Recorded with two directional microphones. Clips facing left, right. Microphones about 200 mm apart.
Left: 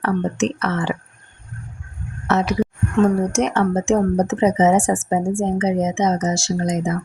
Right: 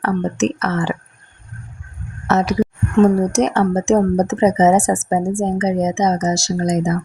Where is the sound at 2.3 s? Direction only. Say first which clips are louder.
Right 2 dB; 40° right (ahead or behind).